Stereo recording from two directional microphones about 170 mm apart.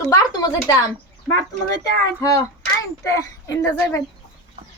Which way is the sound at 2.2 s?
20° left (ahead or behind).